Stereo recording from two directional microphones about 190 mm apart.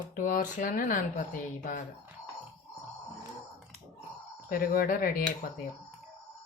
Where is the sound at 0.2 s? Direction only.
45° left (ahead or behind).